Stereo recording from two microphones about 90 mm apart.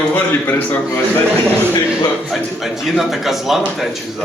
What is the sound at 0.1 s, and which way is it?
Speech, 20° left (ahead or behind).